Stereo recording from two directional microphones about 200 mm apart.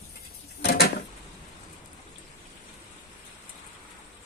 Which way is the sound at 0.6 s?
55° left (ahead or behind).